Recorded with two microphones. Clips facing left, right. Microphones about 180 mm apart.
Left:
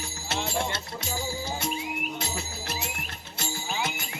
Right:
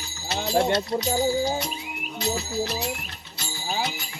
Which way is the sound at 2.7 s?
50° left (ahead or behind).